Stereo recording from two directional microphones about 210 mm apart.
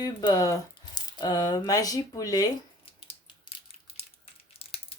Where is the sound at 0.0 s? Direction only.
20° left (ahead or behind).